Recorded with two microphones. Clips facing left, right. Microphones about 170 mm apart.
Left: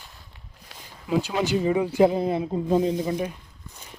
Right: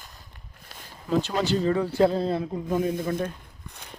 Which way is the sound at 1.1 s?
10° left (ahead or behind).